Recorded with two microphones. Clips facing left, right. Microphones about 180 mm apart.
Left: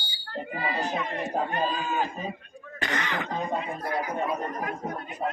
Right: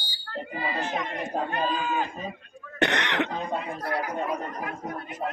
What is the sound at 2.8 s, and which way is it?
Speech, 75° right (ahead or behind).